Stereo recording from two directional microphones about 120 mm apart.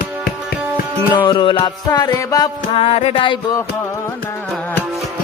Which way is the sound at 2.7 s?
60° left (ahead or behind).